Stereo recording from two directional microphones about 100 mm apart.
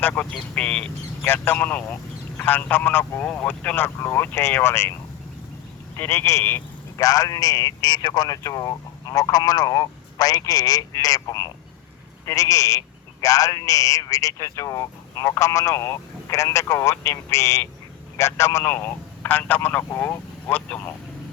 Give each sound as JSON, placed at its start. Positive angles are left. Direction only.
{"t": 0.0, "sound": "speech", "side_deg": 15}
{"t": 6.0, "sound": "speech", "side_deg": 25}
{"t": 6.9, "sound": "a man's voice", "side_deg": 35}